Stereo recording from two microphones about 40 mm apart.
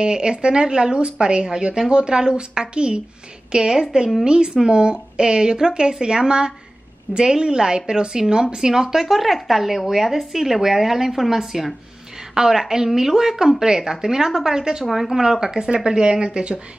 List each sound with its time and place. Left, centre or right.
0.0 s a woman's voice: right
9.0 s speech: centre
14.9 s a woman's voice: centre; by 16.6 s right